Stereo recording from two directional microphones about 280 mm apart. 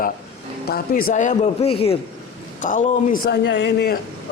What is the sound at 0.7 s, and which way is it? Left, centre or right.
A man's voice, left.